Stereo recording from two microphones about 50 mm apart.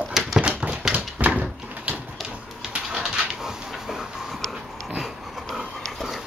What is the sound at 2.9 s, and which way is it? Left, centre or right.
Dog, centre.